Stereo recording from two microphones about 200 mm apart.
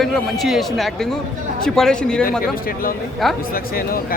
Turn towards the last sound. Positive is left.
turn(degrees=45)  # may be behind; listen again after turning